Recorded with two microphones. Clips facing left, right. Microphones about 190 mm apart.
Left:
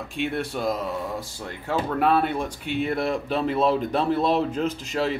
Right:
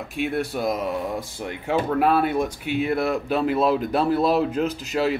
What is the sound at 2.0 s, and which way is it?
Speech, 5° right (ahead or behind).